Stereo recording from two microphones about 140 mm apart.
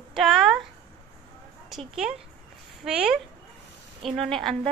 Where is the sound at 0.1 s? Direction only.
Centre (ahead or behind).